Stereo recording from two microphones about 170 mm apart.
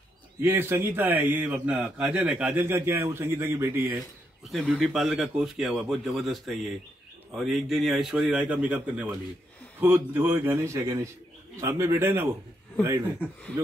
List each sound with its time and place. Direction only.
0.4 s a man's voice: 15° right (ahead or behind)
4.5 s a man's voice: 5° left (ahead or behind); by 12.3 s 15° right (ahead or behind)